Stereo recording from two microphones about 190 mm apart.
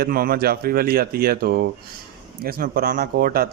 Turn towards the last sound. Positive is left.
turn(degrees=-50)  # may be behind; listen again after turning